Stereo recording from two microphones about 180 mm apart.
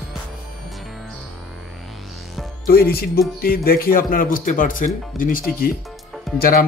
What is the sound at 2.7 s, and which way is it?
Speech, 60° left (ahead or behind).